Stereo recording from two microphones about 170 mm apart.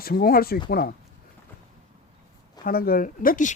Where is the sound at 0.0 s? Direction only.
60° left (ahead or behind).